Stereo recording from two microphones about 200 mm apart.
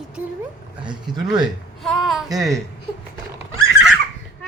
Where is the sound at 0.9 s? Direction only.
20° right (ahead or behind).